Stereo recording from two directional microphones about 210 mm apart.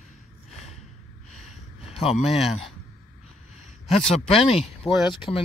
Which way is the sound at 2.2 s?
Centre (ahead or behind).